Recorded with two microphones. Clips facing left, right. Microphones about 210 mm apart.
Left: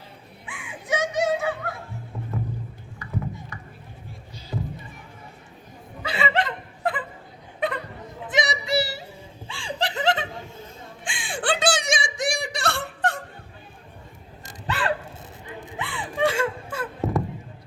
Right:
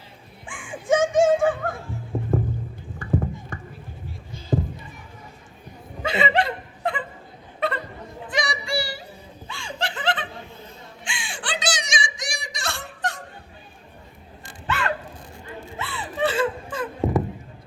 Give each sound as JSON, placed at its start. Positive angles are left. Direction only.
{"t": 0.4, "sound": "music", "side_deg": -50}
{"t": 3.0, "sound": "a sound", "side_deg": -50}
{"t": 6.0, "sound": "chuckle", "side_deg": -25}
{"t": 6.8, "sound": "a sound", "side_deg": 0}
{"t": 7.6, "sound": "a sound", "side_deg": 15}
{"t": 9.5, "sound": "laughter", "side_deg": 30}
{"t": 11.0, "sound": "whimper", "side_deg": 50}
{"t": 14.4, "sound": "hiccup", "side_deg": 35}
{"t": 15.4, "sound": "gasp", "side_deg": 15}